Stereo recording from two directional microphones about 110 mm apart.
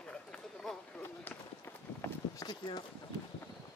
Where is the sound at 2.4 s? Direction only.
40° left (ahead or behind).